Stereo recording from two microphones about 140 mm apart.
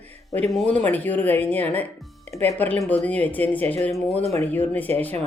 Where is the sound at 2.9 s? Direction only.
10° left (ahead or behind).